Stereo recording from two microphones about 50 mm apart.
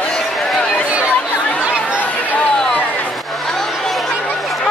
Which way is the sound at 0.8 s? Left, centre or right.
Right.